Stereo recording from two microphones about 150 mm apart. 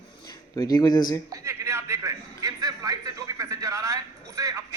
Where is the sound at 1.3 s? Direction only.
20° right (ahead or behind).